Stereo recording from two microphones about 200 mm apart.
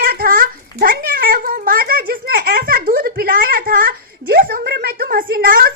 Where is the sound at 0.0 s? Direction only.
50° right (ahead or behind).